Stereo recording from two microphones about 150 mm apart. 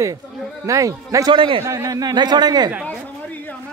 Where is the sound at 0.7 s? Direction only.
20° right (ahead or behind).